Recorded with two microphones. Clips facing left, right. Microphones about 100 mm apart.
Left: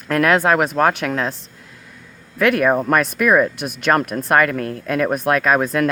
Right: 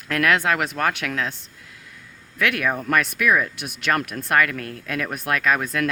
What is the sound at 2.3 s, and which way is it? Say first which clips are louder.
Speech: left 8 dB; 40° left (ahead or behind).